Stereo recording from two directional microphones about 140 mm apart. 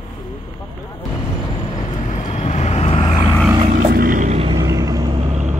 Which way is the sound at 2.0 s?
55° left (ahead or behind).